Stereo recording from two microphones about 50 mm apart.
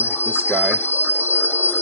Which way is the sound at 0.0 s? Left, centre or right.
Left.